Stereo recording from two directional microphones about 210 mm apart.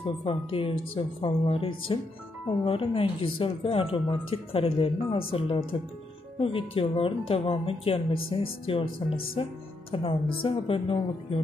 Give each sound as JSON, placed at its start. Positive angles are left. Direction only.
{"t": 0.0, "sound": "speech", "side_deg": 25}